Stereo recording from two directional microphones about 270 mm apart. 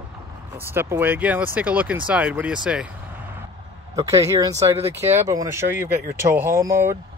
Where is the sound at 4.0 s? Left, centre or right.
Centre.